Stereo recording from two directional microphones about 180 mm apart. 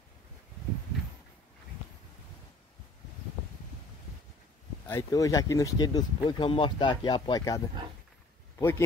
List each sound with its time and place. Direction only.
4.8 s speech: 15° left (ahead or behind)